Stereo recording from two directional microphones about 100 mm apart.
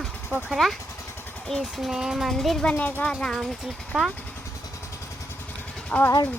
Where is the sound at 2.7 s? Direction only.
15° left (ahead or behind).